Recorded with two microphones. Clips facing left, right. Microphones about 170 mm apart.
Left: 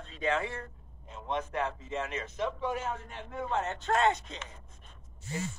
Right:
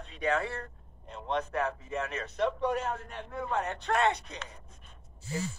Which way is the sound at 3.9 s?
30° left (ahead or behind).